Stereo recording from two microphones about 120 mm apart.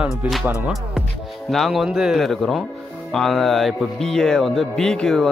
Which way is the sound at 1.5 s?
Centre (ahead or behind).